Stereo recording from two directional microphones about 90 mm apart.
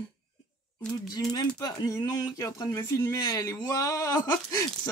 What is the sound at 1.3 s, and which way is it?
Speech, 40° left (ahead or behind).